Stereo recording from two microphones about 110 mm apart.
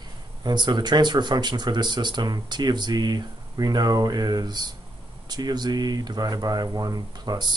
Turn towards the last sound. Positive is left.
turn(degrees=-40)  # may be behind; listen again after turning